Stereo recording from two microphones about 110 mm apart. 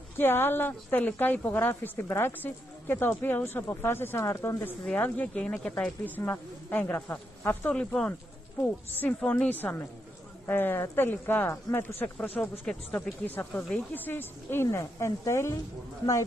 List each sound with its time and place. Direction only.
0.2 s a woman's voice: 20° left (ahead or behind)
4.8 s speech: 15° left (ahead or behind)
12.4 s speech: 5° left (ahead or behind)
13.2 s a woman's voice: 15° left (ahead or behind)